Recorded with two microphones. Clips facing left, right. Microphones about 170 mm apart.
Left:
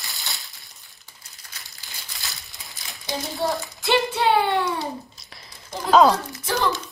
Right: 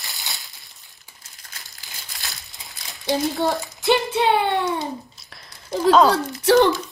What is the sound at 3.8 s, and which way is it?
Child singing, 20° right (ahead or behind).